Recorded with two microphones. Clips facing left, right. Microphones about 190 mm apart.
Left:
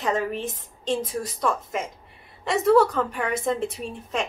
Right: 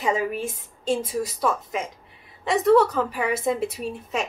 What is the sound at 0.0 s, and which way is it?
A woman's voice, 10° right (ahead or behind).